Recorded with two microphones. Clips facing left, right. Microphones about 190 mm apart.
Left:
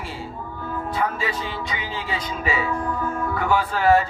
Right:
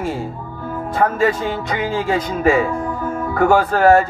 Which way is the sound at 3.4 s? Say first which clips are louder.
Right 10 dB; 45° right (ahead or behind).